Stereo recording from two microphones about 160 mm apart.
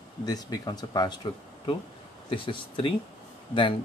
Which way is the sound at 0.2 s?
25° left (ahead or behind).